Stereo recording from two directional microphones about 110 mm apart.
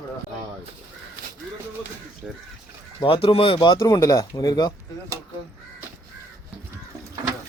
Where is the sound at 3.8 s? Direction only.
30° left (ahead or behind).